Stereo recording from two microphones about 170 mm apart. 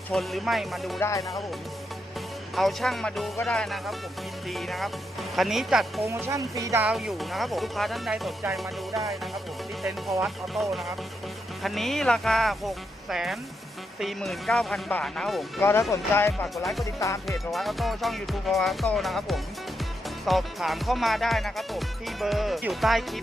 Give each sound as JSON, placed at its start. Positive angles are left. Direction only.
{"t": 0.1, "sound": "music", "side_deg": 0}
{"t": 0.9, "sound": "speech", "side_deg": 15}
{"t": 2.6, "sound": "music", "side_deg": 0}
{"t": 6.1, "sound": "speech", "side_deg": -15}
{"t": 6.8, "sound": "music", "side_deg": 0}
{"t": 15.9, "sound": "speech", "side_deg": 15}
{"t": 17.2, "sound": "music", "side_deg": 0}